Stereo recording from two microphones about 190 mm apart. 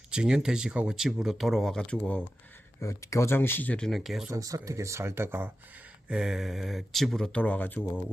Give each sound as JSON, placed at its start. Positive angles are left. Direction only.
{"t": 0.1, "sound": "speech", "side_deg": -5}
{"t": 4.3, "sound": "speech", "side_deg": -15}